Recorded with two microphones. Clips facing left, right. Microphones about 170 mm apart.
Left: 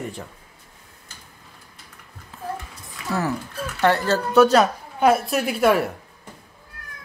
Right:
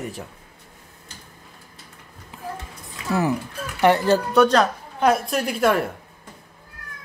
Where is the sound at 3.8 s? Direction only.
15° right (ahead or behind).